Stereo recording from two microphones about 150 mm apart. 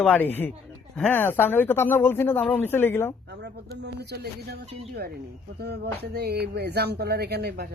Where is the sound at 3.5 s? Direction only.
90° right.